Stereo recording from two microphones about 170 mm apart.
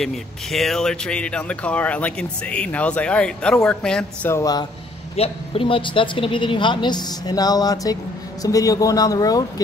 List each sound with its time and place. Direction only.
0.0 s speech: centre (ahead or behind)
4.3 s speech: 20° left (ahead or behind)
5.1 s speech: 35° left (ahead or behind)